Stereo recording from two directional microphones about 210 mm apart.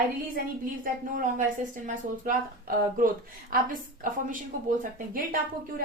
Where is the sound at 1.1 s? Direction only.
40° right (ahead or behind).